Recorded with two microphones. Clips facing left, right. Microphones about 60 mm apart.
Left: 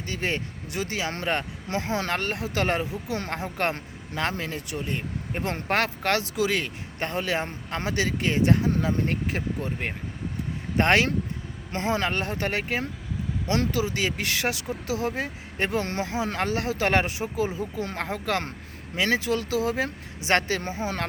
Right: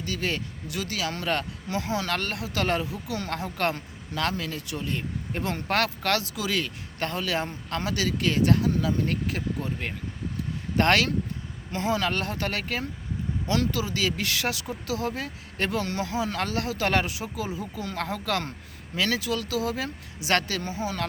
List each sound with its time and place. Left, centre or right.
0.0 s speech: left